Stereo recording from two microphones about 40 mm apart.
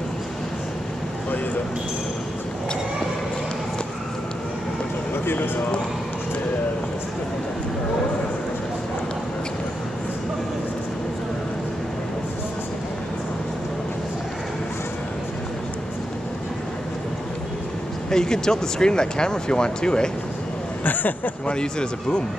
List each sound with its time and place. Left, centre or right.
5.2 s speech: left
18.1 s speech: centre
20.8 s speech: left
21.5 s speech: left